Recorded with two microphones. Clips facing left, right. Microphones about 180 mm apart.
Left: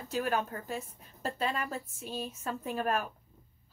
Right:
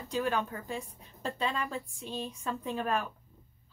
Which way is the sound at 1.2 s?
40° left (ahead or behind).